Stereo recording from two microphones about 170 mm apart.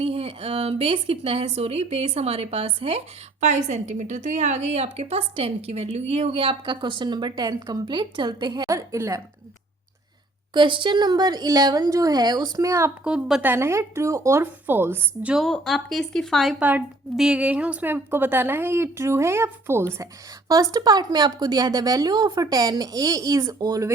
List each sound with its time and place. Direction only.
0.0 s a woman's voice: 35° right (ahead or behind); by 9.2 s 20° right (ahead or behind)
10.5 s speech: 30° right (ahead or behind)
13.1 s speech: 5° right (ahead or behind); by 23.9 s 20° right (ahead or behind)